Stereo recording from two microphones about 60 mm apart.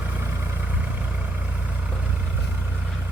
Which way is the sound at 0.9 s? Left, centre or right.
Right.